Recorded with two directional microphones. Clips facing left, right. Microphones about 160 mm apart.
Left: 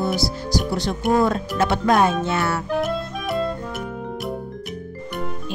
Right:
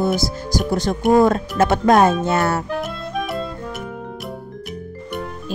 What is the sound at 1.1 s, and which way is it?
Music, 45° right (ahead or behind).